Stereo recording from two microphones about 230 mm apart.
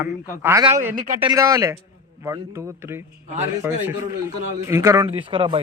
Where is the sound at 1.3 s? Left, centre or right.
Centre.